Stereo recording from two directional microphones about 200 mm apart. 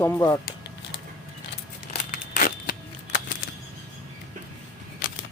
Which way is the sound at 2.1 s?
40° left (ahead or behind).